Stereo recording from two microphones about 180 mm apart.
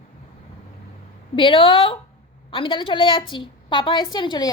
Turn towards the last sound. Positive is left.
turn(degrees=25)  # may be behind; listen again after turning